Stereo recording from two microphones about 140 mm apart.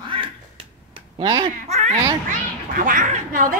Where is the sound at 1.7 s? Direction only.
50° right (ahead or behind).